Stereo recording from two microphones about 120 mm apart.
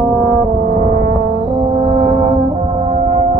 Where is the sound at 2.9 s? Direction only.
80° right.